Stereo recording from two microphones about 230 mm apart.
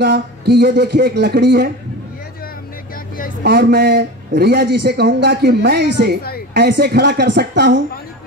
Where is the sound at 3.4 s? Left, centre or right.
Right.